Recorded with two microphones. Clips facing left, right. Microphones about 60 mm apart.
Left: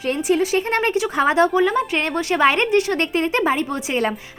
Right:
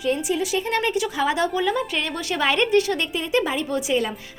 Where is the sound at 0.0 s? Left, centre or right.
Left.